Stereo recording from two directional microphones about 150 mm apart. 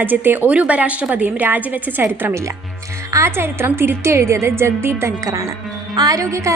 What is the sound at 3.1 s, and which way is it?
A woman's voice, 15° right (ahead or behind).